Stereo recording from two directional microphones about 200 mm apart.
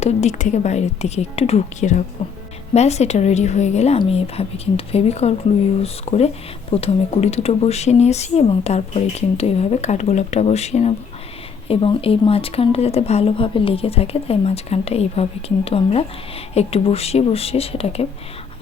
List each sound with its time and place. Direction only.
0.0 s speech: 35° left (ahead or behind)